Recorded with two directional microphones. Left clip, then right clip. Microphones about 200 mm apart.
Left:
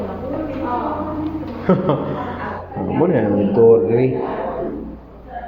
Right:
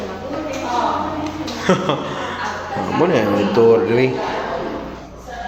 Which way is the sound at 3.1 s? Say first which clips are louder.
Right 1 dB; 25° right (ahead or behind).